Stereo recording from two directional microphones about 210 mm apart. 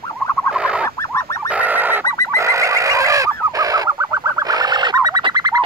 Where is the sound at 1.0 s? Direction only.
15° left (ahead or behind).